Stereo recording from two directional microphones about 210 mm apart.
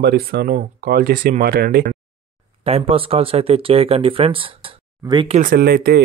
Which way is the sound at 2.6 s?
30° right (ahead or behind).